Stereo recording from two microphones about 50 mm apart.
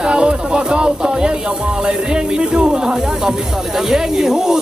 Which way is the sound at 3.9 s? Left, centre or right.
Centre.